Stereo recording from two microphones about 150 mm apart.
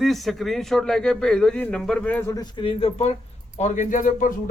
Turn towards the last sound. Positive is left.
turn(degrees=60)  # may be behind; listen again after turning